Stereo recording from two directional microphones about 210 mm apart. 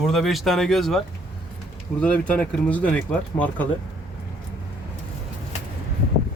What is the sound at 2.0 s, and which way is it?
Speech, 5° left (ahead or behind).